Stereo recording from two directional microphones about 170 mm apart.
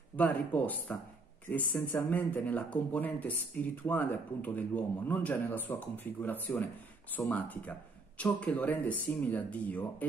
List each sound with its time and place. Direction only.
0.1 s speech: 10° left (ahead or behind)